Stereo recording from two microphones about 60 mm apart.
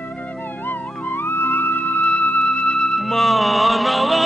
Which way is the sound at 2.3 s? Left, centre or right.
Centre.